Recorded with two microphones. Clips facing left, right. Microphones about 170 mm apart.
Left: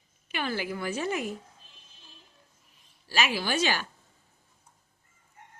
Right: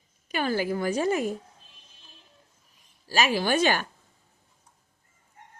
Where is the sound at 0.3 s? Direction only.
40° right (ahead or behind).